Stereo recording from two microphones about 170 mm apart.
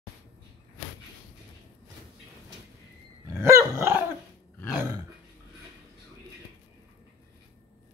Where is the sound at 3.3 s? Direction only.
15° right (ahead or behind).